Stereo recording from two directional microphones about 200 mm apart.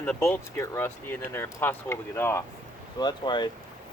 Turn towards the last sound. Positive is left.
turn(degrees=20)  # may be behind; listen again after turning